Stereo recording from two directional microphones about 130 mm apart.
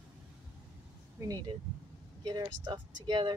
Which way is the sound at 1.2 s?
30° right (ahead or behind).